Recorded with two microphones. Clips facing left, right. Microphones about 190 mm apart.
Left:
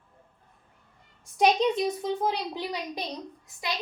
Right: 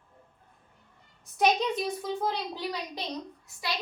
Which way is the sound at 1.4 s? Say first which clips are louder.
Left 3 dB; 20° left (ahead or behind).